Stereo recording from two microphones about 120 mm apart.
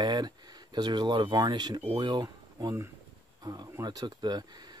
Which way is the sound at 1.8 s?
45° right (ahead or behind).